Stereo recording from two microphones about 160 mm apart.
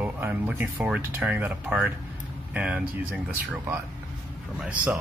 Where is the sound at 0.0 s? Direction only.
10° right (ahead or behind).